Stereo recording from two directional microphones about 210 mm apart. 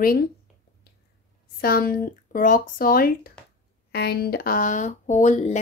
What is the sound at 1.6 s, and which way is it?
Speech, 45° left (ahead or behind).